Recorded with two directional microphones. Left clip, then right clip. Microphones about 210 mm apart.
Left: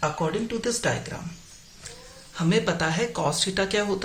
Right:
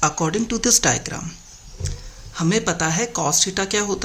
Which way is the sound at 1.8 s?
35° right (ahead or behind).